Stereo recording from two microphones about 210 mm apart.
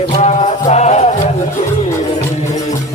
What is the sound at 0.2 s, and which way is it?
Music, 30° left (ahead or behind).